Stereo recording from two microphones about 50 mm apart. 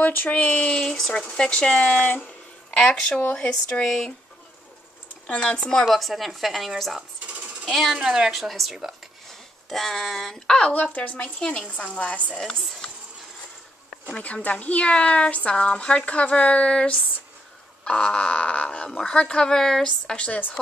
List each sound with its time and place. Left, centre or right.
0.0 s a woman's voice: left
0.4 s speech: left
3.3 s speech: left
3.8 s speech: centre
5.5 s speech: centre
5.9 s a woman's voice: centre
7.0 s sewing machine: right
7.7 s a woman's voice: centre
8.3 s a woman's voice: centre
10.7 s a woman's voice: left
11.3 s speech: centre
12.4 s speech: centre
14.1 s speech: left
18.9 s speech: centre